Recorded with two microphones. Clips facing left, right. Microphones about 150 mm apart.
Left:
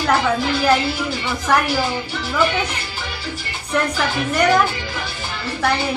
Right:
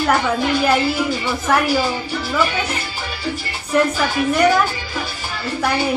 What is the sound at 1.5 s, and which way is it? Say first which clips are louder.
Speech: even; 5° right (ahead or behind).